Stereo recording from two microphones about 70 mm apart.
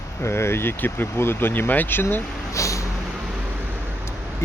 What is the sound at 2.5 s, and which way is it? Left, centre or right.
Vehicle, left.